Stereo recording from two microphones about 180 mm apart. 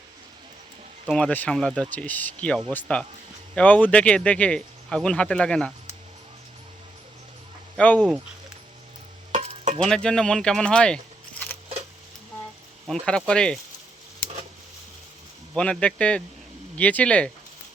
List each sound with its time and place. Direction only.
1.0 s speech: 5° left (ahead or behind)
7.8 s speech: 10° left (ahead or behind)
9.3 s stir: 40° right (ahead or behind)
9.8 s speech: 5° left (ahead or behind)
12.9 s speech: 5° left (ahead or behind)
15.5 s speech: 5° left (ahead or behind)